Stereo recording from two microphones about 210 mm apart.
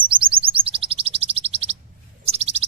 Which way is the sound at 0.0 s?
25° right (ahead or behind).